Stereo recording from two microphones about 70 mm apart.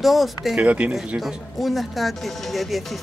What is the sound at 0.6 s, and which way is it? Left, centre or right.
Speech, centre.